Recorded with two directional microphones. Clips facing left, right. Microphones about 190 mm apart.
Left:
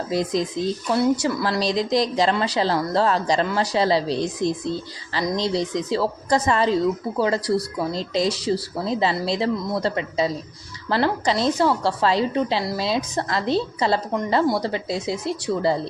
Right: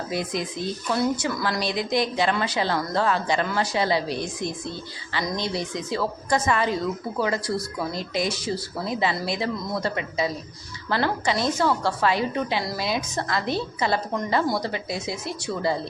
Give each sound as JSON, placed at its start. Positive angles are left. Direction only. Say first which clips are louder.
{"t": 0.1, "sound": "a woman's voice", "louder": "left 7 dB", "side_deg": 35}
{"t": 5.9, "sound": "a woman's voice", "louder": "left 2 dB", "side_deg": 35}